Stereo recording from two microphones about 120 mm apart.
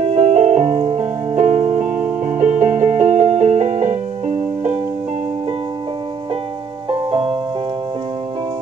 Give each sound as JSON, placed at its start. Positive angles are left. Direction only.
{"t": 0.0, "sound": "music", "side_deg": -65}
{"t": 6.9, "sound": "music", "side_deg": -45}